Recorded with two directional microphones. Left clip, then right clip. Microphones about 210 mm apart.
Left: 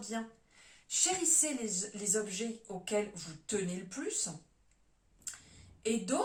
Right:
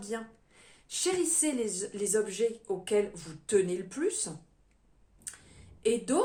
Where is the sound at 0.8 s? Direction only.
40° right (ahead or behind).